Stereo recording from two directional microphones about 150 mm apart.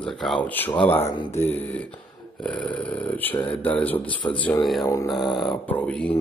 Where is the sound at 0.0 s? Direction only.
Centre (ahead or behind).